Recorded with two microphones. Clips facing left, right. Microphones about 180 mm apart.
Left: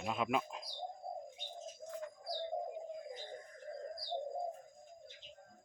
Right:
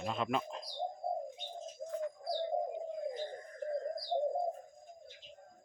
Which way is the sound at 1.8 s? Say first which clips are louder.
Right 9 dB; 35° right (ahead or behind).